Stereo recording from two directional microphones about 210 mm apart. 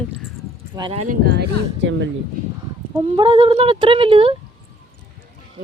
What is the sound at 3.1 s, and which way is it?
Speech, 25° right (ahead or behind).